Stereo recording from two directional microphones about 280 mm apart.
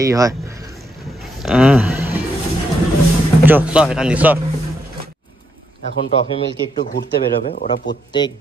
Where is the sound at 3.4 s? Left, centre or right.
Centre.